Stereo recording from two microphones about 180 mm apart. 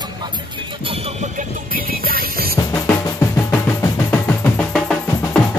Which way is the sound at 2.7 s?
15° left (ahead or behind).